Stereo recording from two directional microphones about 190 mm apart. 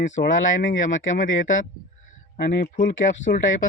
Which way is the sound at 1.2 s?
45° left (ahead or behind).